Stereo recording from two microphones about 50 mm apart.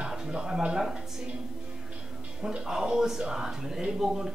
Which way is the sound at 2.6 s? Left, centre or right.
Centre.